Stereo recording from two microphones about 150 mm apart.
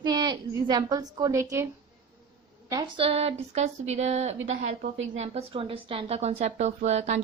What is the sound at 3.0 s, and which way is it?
Speech, 40° right (ahead or behind).